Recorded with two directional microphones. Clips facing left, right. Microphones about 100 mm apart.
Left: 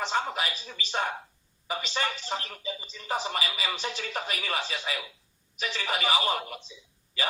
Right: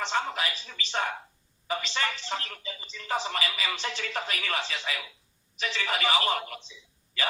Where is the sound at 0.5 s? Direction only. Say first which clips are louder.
Even; 15° left (ahead or behind).